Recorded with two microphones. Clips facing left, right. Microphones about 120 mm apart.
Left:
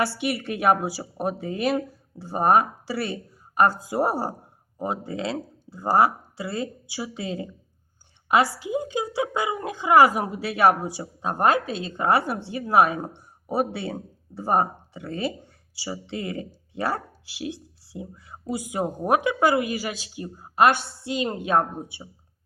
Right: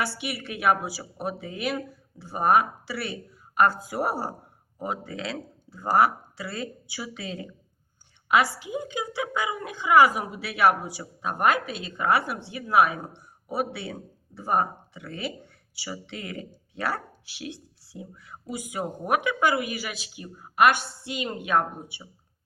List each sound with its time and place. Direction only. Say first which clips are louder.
0.2 s a woman's voice: left 5 dB; 45° left (ahead or behind)